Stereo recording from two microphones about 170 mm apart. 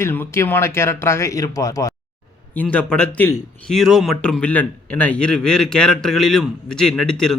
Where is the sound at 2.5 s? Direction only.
10° left (ahead or behind).